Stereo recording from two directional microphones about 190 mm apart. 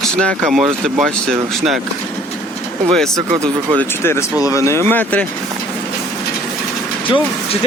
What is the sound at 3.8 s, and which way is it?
Speech, 15° left (ahead or behind).